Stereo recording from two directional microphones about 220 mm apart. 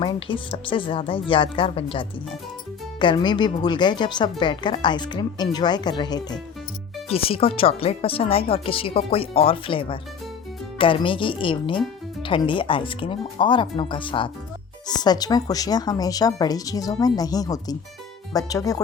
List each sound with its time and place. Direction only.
0.0 s speech: 20° left (ahead or behind)